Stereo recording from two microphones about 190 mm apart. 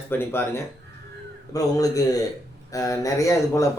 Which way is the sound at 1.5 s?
20° left (ahead or behind).